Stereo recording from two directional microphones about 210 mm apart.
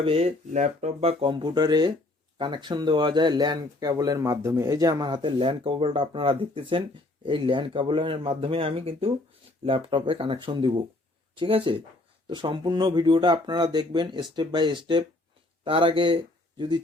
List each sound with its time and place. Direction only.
0.0 s speech: 30° right (ahead or behind)